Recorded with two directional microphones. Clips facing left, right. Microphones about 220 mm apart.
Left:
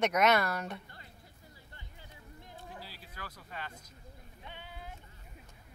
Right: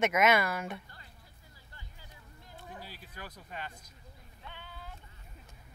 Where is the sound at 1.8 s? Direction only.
25° left (ahead or behind).